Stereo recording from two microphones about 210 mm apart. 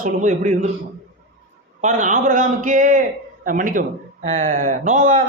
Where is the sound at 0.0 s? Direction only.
35° right (ahead or behind).